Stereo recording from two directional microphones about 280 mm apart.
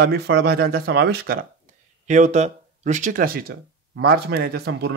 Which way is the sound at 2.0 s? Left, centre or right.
Right.